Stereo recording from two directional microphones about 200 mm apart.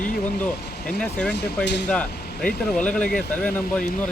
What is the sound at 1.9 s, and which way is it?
Speech, 5° left (ahead or behind).